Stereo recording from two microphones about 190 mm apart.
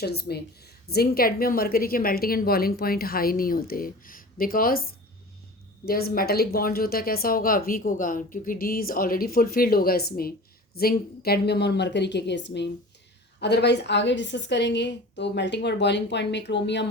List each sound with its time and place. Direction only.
0.0 s a woman's voice: 55° left (ahead or behind)